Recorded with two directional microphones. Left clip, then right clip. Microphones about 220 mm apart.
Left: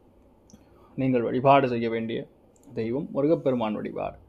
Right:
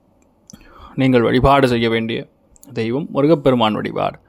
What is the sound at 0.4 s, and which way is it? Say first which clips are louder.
Speech: right 15 dB; 35° right (ahead or behind).